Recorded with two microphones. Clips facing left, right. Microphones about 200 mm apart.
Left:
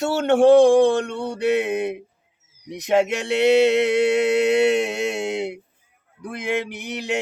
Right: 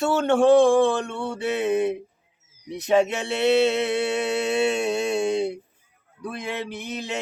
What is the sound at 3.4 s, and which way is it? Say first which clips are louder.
Male singing: left 3 dB; 15° left (ahead or behind).